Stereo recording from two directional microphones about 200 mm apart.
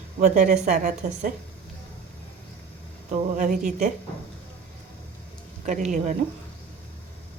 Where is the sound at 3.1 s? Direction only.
40° right (ahead or behind).